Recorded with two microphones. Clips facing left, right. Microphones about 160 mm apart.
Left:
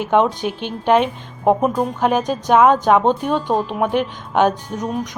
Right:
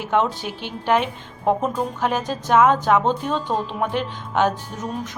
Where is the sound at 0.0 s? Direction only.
20° left (ahead or behind).